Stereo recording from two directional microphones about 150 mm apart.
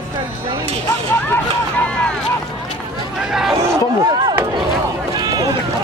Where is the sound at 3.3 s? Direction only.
Centre (ahead or behind).